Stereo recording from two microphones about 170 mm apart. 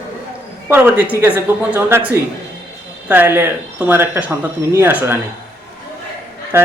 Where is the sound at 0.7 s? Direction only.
10° right (ahead or behind).